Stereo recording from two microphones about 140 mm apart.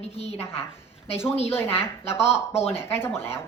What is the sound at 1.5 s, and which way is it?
A woman's voice, 15° left (ahead or behind).